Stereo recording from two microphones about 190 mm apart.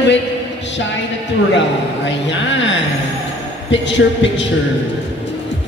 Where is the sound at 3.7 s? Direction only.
70° left (ahead or behind).